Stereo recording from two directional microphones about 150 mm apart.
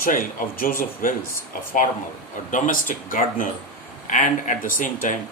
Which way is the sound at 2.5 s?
60° left (ahead or behind).